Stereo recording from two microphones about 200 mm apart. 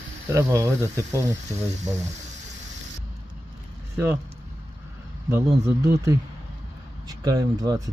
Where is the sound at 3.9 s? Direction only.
10° right (ahead or behind).